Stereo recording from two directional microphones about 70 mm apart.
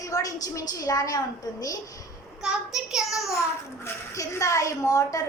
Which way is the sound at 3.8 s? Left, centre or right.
Left.